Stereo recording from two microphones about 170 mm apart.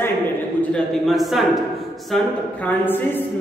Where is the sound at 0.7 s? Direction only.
Centre (ahead or behind).